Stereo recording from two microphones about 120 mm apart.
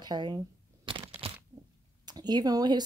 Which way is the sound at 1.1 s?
55° right (ahead or behind).